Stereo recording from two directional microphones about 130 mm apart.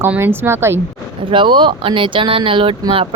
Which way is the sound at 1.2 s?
40° right (ahead or behind).